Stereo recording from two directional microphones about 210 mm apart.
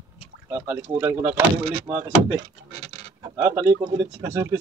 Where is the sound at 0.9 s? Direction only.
10° right (ahead or behind).